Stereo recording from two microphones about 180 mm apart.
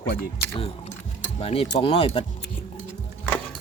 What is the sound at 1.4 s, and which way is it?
Speech, 30° left (ahead or behind).